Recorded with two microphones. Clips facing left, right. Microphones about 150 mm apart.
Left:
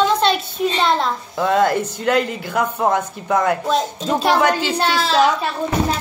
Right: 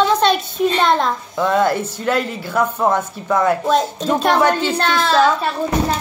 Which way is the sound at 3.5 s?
45° right (ahead or behind).